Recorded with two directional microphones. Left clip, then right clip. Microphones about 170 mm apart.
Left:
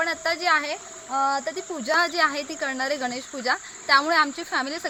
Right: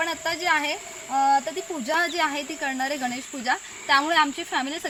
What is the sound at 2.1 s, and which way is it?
Speech, 25° left (ahead or behind).